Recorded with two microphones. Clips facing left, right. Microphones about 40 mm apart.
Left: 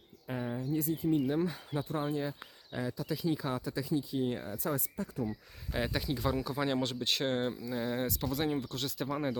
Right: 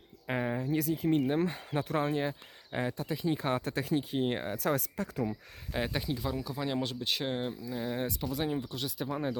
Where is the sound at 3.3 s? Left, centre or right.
Right.